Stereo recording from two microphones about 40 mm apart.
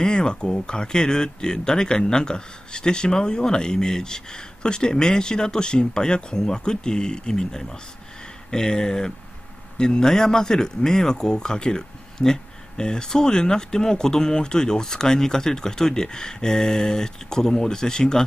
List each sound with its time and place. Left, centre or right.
0.0 s speech: centre